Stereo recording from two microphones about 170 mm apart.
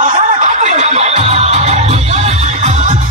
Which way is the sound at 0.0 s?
45° right (ahead or behind).